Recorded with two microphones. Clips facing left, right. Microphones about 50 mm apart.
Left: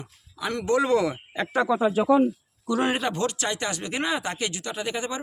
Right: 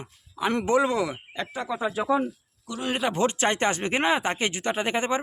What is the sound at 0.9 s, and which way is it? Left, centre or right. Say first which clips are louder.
Speech: left 4 dB; centre.